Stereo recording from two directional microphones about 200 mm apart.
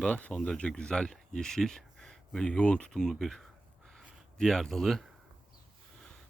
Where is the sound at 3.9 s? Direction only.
Centre (ahead or behind).